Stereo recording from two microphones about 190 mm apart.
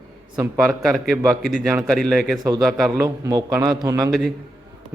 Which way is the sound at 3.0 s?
15° right (ahead or behind).